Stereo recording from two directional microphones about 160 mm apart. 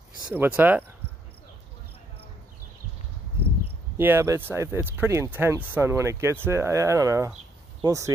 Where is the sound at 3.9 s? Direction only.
15° right (ahead or behind).